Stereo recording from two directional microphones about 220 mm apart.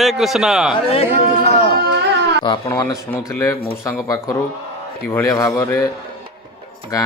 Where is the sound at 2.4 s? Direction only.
20° left (ahead or behind).